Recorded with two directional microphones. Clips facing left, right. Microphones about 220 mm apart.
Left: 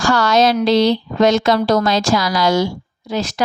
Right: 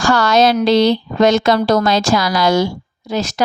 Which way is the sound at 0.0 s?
55° right (ahead or behind).